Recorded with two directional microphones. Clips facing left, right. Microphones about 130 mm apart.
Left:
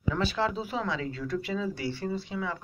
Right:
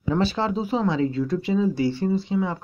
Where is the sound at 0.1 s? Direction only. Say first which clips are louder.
Right 6 dB; 30° right (ahead or behind).